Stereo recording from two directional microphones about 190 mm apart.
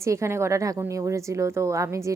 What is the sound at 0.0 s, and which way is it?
A woman's voice, 15° right (ahead or behind).